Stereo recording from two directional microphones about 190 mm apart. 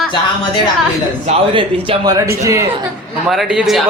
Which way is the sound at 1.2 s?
25° right (ahead or behind).